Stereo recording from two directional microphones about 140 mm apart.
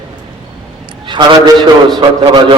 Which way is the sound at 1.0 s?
30° right (ahead or behind).